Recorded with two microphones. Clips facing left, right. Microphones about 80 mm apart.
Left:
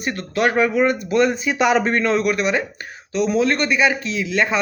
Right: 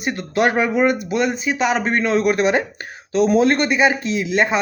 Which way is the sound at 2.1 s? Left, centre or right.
Right.